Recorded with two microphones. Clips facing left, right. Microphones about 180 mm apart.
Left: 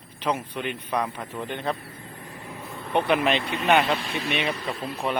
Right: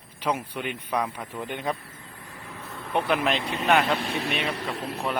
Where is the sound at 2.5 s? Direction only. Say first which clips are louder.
Left 2 dB; 15° left (ahead or behind).